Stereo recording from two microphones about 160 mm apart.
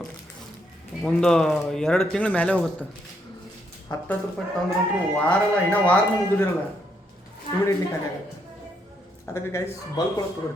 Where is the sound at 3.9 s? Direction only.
25° left (ahead or behind).